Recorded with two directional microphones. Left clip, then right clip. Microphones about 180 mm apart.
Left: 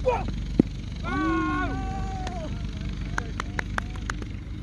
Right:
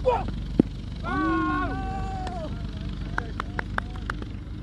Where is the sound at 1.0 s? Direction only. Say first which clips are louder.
Right 1 dB; 35° left (ahead or behind).